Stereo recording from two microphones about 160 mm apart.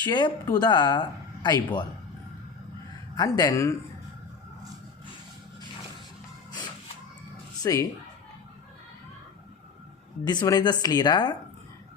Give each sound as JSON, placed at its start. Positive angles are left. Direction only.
{"t": 0.0, "sound": "a woman's voice", "side_deg": 25}
{"t": 3.2, "sound": "a woman's voice", "side_deg": 20}
{"t": 7.6, "sound": "a woman's voice", "side_deg": 20}
{"t": 10.2, "sound": "a woman's voice", "side_deg": 25}